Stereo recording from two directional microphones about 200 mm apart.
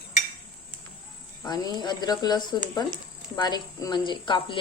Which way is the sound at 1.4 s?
20° left (ahead or behind).